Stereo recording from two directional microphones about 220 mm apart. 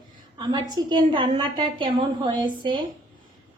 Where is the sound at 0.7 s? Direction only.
20° right (ahead or behind).